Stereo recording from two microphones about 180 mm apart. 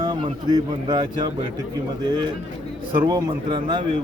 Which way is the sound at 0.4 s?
25° right (ahead or behind).